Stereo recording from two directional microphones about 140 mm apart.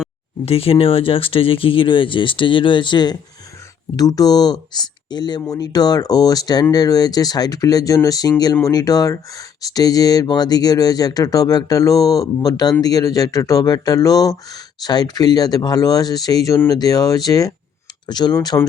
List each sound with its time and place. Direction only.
0.4 s speech: 45° left (ahead or behind)